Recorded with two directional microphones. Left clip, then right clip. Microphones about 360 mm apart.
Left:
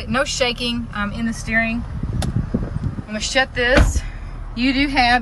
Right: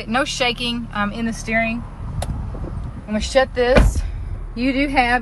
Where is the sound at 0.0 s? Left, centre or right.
Centre.